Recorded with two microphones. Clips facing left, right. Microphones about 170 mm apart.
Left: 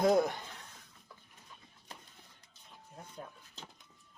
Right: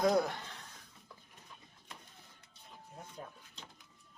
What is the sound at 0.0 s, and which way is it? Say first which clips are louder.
Speech: left 2 dB; 25° left (ahead or behind).